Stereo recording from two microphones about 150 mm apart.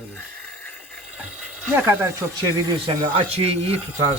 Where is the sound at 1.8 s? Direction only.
15° right (ahead or behind).